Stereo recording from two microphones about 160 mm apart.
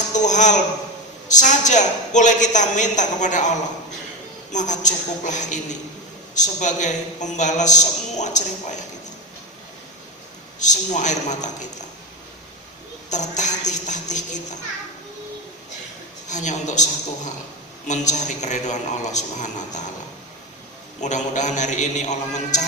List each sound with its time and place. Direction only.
0.1 s a man's voice: 50° left (ahead or behind)
10.6 s a man's voice: 50° left (ahead or behind)
13.1 s a man's voice: 50° left (ahead or behind)
16.3 s a man's voice: 50° left (ahead or behind)
21.0 s a man's voice: 50° left (ahead or behind)